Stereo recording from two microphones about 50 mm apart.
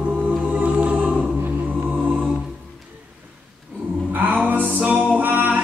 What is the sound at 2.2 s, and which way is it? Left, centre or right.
Music, centre.